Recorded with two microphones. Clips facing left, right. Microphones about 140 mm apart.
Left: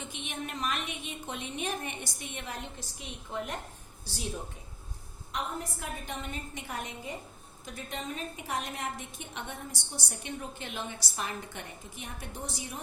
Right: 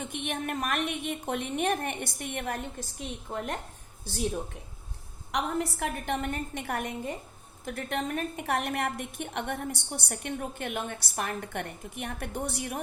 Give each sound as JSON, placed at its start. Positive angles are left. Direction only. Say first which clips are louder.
{"t": 0.0, "sound": "a woman's voice", "louder": "right 6 dB", "side_deg": -55}
{"t": 5.3, "sound": "a woman's voice", "louder": "right 6 dB", "side_deg": -75}